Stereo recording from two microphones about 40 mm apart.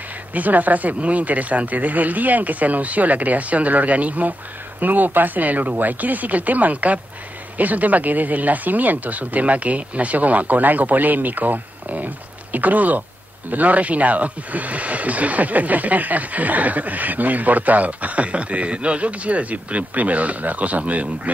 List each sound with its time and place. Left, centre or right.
0.3 s speech: right